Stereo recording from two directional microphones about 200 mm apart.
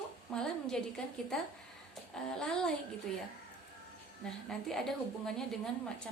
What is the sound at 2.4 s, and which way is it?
Speech, 5° left (ahead or behind).